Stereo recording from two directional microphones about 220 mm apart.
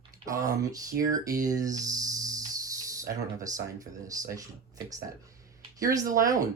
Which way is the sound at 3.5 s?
15° right (ahead or behind).